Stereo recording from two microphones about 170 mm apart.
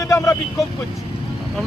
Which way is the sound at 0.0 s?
15° left (ahead or behind).